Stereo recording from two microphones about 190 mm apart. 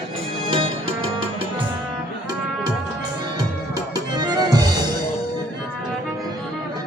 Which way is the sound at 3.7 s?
20° right (ahead or behind).